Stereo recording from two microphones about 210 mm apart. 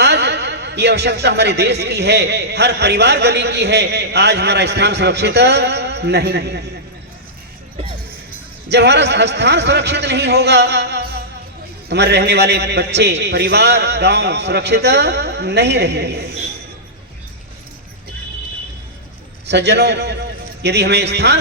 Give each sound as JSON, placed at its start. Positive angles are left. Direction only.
{"t": 0.0, "sound": "speech", "side_deg": -55}
{"t": 8.7, "sound": "speech", "side_deg": -55}
{"t": 19.5, "sound": "a man's voice", "side_deg": -55}